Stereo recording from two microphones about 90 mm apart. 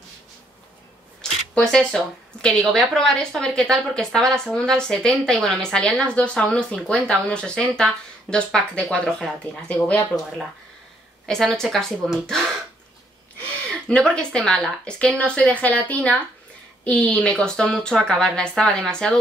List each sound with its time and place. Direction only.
1.5 s a woman's voice: 10° left (ahead or behind)
11.2 s speech: 5° left (ahead or behind)
13.7 s a woman's voice: 10° left (ahead or behind)